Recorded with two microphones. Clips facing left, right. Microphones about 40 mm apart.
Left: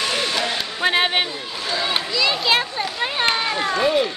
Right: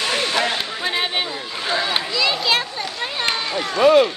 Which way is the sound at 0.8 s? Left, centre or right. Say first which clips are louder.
Left 5 dB; left.